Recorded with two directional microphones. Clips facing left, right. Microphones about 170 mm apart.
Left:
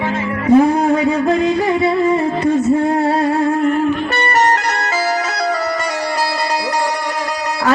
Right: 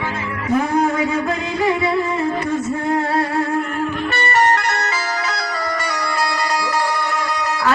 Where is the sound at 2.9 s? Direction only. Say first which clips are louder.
Left 3 dB; 30° left (ahead or behind).